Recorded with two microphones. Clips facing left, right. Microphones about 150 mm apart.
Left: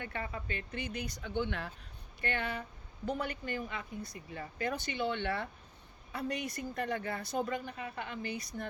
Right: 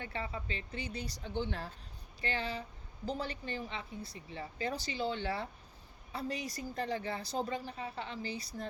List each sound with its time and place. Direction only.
0.0 s speech: 30° right (ahead or behind)
2.2 s speech: 55° left (ahead or behind)
3.2 s speech: 30° right (ahead or behind)
4.9 s speech: 60° left (ahead or behind)
6.4 s speech: 30° right (ahead or behind)